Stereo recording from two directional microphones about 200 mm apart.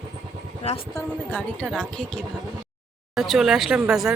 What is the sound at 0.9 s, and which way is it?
Speech, 5° left (ahead or behind).